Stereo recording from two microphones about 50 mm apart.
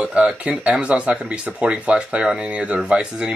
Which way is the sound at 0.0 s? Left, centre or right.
Centre.